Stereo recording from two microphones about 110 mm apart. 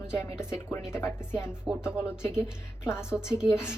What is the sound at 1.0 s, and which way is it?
Speech, 10° right (ahead or behind).